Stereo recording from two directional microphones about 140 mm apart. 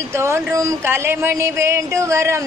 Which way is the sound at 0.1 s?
20° right (ahead or behind).